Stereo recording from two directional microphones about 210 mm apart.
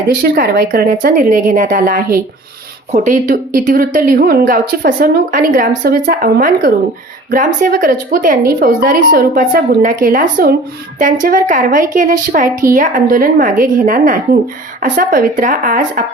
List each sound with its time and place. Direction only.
0.2 s speech: 45° right (ahead or behind)